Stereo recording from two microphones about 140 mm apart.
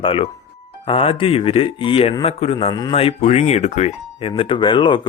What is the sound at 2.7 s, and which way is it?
Speech, 30° left (ahead or behind).